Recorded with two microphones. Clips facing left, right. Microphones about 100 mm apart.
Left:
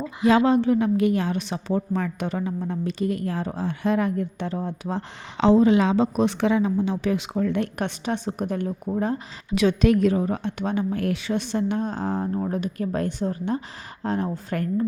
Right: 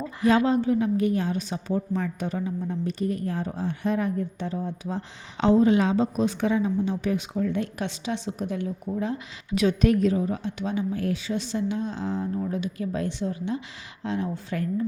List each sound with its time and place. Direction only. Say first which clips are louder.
0.3 s a woman's voice: left 3 dB; 85° left; by 9.2 s 45° left (ahead or behind)
9.6 s a woman's voice: left 2 dB; 85° left; by 14.8 s 55° left (ahead or behind)